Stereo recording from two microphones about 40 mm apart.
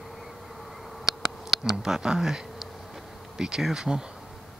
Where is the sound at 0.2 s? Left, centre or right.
Centre.